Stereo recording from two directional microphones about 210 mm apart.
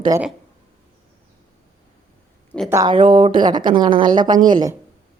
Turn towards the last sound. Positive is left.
turn(degrees=-15)  # may be behind; listen again after turning